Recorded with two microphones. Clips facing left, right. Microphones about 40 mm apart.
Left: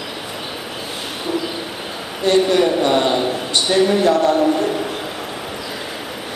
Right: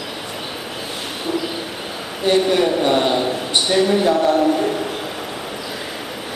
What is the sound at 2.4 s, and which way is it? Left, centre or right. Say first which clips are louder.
A man's voice: left 1 dB; centre.